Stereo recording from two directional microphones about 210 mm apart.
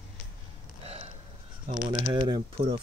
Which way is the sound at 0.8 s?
30° right (ahead or behind).